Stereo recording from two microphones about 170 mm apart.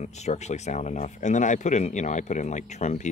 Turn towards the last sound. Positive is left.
turn(degrees=40)  # may be behind; listen again after turning